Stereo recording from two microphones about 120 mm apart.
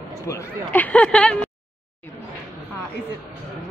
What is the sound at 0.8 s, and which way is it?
Speech, 10° left (ahead or behind).